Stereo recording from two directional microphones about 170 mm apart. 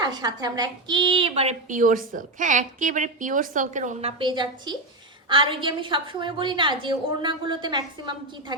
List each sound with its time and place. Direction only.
0.0 s a woman's voice: 25° right (ahead or behind); by 4.1 s 45° right (ahead or behind)
4.2 s a woman's voice: 25° right (ahead or behind)